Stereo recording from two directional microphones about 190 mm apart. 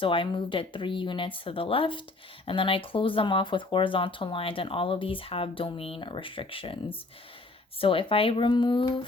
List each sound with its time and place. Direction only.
0.0 s speech: 25° left (ahead or behind)